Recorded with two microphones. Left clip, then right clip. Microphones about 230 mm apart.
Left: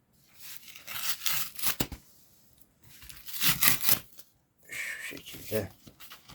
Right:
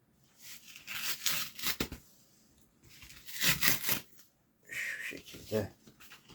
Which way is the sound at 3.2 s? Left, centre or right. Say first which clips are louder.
Left 2 dB; left.